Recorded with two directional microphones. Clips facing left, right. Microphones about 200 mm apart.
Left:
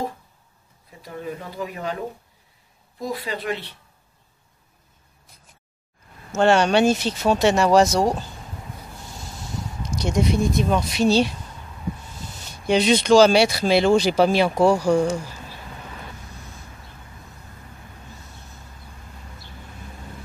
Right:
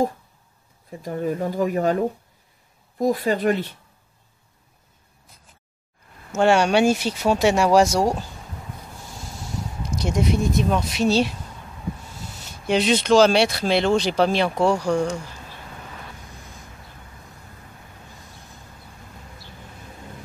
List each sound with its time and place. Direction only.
0.8 s speech: 45° right (ahead or behind)
6.3 s speech: 10° right (ahead or behind)
9.9 s speech: 5° right (ahead or behind)
12.6 s speech: centre (ahead or behind)